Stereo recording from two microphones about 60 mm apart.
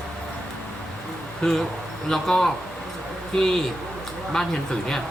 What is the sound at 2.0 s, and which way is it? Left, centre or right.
Speech, centre.